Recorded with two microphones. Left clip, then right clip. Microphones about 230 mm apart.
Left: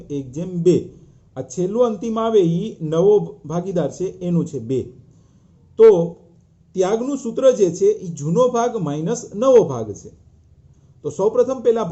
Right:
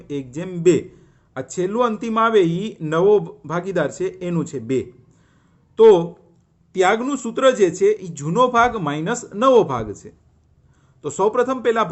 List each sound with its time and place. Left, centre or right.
0.1 s speech: right
11.0 s speech: right